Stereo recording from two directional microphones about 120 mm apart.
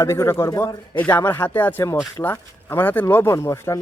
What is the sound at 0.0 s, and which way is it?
Speech, 25° left (ahead or behind).